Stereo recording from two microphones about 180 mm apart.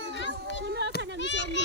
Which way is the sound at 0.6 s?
70° right (ahead or behind).